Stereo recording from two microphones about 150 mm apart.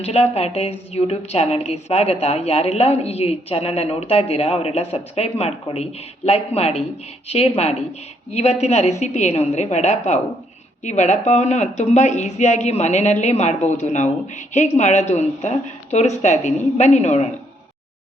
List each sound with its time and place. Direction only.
0.0 s a woman's voice: 45° left (ahead or behind)